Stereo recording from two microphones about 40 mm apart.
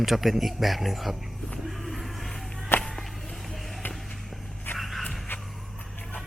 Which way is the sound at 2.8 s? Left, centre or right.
Centre.